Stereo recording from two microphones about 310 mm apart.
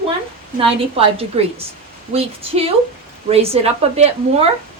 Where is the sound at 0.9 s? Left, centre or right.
Centre.